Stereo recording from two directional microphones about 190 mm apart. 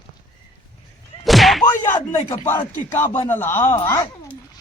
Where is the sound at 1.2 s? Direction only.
Centre (ahead or behind).